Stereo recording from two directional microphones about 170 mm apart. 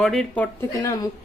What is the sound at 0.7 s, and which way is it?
Speech, 20° left (ahead or behind).